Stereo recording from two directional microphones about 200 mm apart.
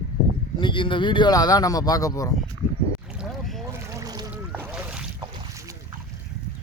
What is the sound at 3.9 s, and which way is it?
Boat, 15° right (ahead or behind).